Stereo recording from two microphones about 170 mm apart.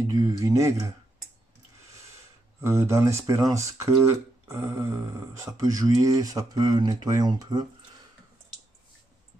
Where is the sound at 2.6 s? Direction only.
15° right (ahead or behind).